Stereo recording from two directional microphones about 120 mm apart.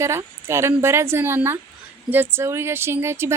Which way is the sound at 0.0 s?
20° right (ahead or behind).